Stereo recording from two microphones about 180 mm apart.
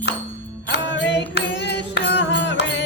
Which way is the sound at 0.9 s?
75° left (ahead or behind).